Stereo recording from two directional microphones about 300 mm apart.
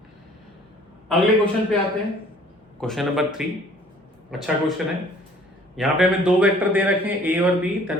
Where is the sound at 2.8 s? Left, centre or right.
Centre.